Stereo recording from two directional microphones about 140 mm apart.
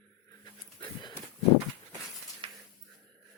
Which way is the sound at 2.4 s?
40° right (ahead or behind).